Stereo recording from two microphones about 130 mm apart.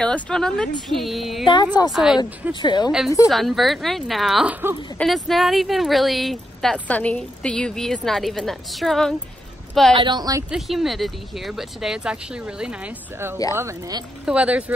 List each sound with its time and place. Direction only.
0.0 s speech: 5° left (ahead or behind)
1.4 s speech: 35° left (ahead or behind)
1.9 s speech: 5° right (ahead or behind)
2.6 s speech: 35° left (ahead or behind)
3.3 s speech: centre (ahead or behind)
4.5 s speech: 15° right (ahead or behind)
4.9 s speech: centre (ahead or behind)
9.9 s a woman's voice: 35° right (ahead or behind)
10.5 s speech: centre (ahead or behind)
13.6 s speech: 25° right (ahead or behind)
14.2 s speech: 10° right (ahead or behind)